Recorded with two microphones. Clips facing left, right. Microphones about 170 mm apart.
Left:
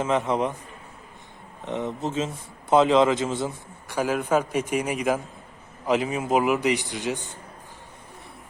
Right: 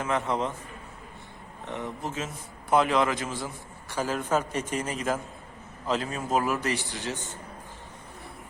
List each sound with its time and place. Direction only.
0.0 s a man's voice: 20° left (ahead or behind)
1.6 s a man's voice: 20° left (ahead or behind)
3.8 s a man's voice: 10° left (ahead or behind)